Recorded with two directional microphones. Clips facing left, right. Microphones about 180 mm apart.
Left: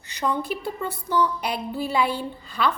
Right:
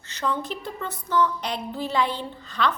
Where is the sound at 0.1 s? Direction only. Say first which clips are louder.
Left 2 dB; 10° left (ahead or behind).